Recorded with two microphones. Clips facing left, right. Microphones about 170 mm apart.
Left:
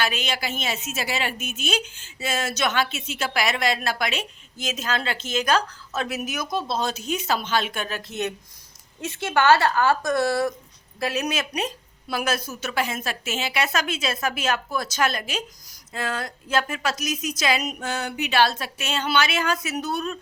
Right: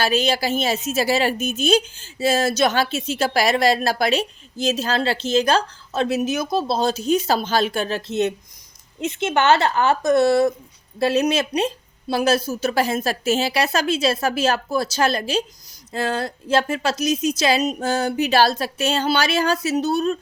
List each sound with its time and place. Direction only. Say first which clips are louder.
0.0 s a woman's voice: right 7 dB; 35° right (ahead or behind)